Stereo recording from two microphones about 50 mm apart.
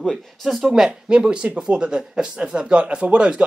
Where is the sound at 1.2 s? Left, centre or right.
Right.